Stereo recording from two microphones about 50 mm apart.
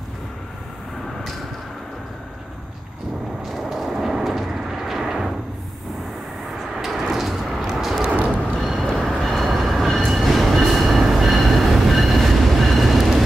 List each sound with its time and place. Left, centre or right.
3.5 s a sound: centre
6.8 s vehicle: centre
8.1 s vehicle: right
8.8 s train: centre